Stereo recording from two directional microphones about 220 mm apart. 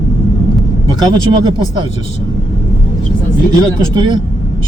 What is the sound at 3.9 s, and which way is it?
Speech, 20° right (ahead or behind).